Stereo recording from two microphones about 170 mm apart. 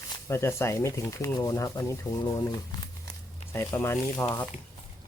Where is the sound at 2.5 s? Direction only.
20° left (ahead or behind).